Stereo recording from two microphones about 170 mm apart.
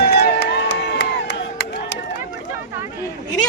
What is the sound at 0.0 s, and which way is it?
Crowd, 75° left (ahead or behind).